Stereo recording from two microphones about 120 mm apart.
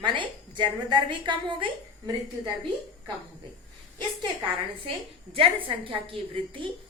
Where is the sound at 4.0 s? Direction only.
40° right (ahead or behind).